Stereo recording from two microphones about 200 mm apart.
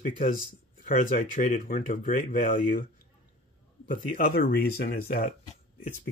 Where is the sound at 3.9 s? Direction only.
45° left (ahead or behind).